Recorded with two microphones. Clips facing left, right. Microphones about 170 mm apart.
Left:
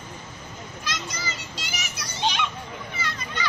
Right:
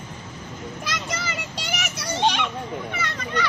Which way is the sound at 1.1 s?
65° right (ahead or behind).